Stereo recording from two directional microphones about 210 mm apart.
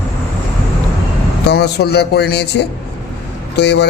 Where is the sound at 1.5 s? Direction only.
50° left (ahead or behind).